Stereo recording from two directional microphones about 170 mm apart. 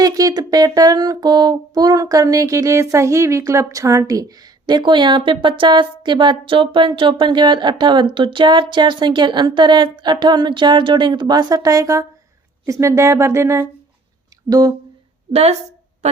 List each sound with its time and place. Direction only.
0.0 s a sound: 20° right (ahead or behind)
12.6 s speech: 20° right (ahead or behind)
15.3 s a woman's voice: 40° right (ahead or behind)